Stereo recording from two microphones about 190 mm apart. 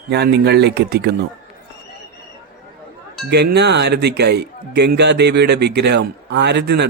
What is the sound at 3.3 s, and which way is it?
A man's voice, 60° right (ahead or behind).